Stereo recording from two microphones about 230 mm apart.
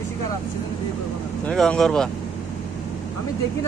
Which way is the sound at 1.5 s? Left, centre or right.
Centre.